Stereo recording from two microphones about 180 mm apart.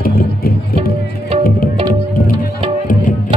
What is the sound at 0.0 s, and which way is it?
Music, 55° left (ahead or behind).